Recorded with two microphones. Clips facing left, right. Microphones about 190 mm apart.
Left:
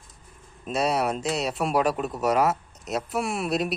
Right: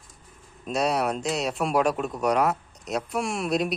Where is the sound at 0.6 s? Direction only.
Centre (ahead or behind).